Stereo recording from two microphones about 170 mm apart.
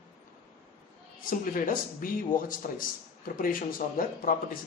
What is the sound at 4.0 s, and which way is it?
Speech, 55° left (ahead or behind).